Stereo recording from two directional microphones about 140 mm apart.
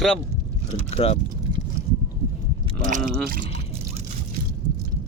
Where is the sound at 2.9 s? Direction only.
70° right (ahead or behind).